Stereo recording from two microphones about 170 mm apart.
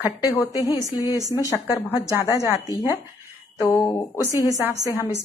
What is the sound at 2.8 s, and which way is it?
Speech, 15° right (ahead or behind).